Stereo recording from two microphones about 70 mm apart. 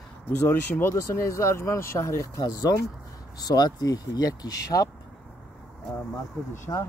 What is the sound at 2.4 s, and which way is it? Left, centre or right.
Speech, left.